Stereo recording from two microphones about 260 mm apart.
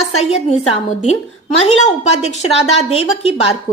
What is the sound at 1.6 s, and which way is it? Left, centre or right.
A woman's voice, left.